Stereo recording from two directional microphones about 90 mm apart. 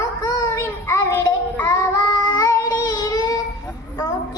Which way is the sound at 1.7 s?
55° left (ahead or behind).